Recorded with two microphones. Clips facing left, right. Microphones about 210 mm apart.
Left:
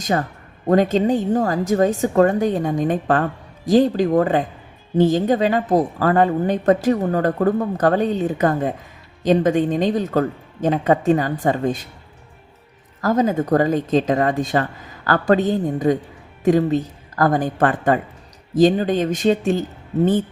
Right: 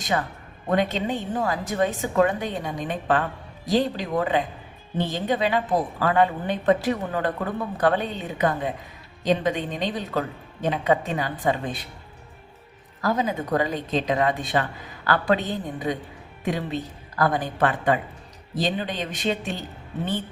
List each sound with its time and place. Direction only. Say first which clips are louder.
0.0 s a woman's voice: left 5 dB; 40° left (ahead or behind)
13.0 s a woman's voice: left 7 dB; 45° left (ahead or behind)